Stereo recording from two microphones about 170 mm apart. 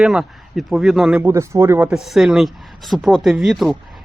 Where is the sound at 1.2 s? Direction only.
15° right (ahead or behind).